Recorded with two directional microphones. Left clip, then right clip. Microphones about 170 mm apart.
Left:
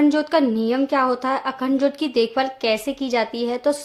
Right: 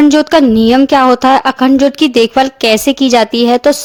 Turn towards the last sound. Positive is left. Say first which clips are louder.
# right 13 dB
turn(degrees=-55)  # may be behind; listen again after turning